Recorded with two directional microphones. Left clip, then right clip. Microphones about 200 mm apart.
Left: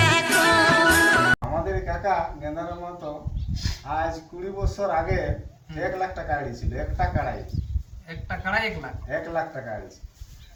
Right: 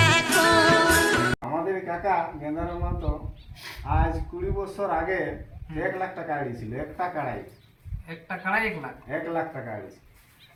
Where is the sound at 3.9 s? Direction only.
20° left (ahead or behind).